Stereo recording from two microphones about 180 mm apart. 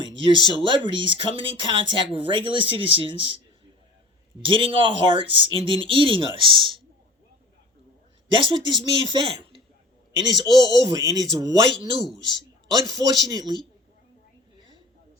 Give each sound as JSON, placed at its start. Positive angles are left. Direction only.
{"t": 0.0, "sound": "speech", "side_deg": -25}
{"t": 4.4, "sound": "speech", "side_deg": -30}
{"t": 8.3, "sound": "speech", "side_deg": -25}